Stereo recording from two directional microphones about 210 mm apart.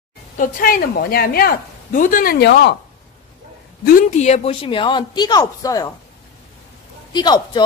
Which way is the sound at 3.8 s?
40° left (ahead or behind).